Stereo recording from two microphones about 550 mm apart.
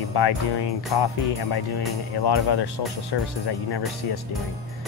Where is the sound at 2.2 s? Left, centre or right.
Left.